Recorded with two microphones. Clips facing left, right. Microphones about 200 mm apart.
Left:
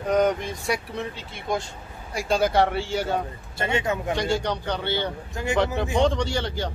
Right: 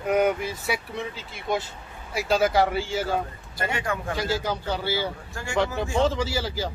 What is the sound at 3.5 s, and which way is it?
Speech, 25° left (ahead or behind).